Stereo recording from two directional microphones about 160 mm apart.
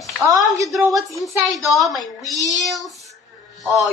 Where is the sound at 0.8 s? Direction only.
Centre (ahead or behind).